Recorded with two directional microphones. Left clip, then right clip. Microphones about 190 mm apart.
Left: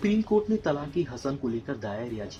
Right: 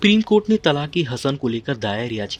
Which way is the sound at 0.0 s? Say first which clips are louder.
Right 9 dB; 50° right (ahead or behind).